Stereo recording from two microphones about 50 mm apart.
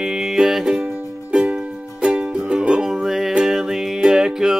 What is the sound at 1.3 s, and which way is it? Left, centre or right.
Music, centre.